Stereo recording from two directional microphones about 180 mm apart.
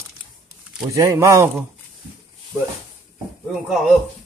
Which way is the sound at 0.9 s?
15° right (ahead or behind).